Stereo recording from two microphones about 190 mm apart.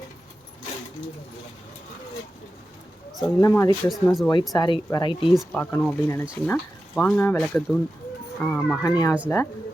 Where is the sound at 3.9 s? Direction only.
Centre (ahead or behind).